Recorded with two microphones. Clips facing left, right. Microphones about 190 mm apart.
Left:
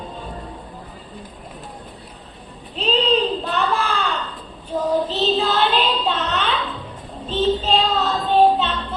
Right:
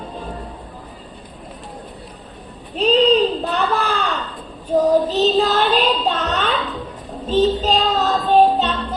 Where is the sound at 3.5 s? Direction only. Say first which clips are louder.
Right 2 dB; 40° right (ahead or behind).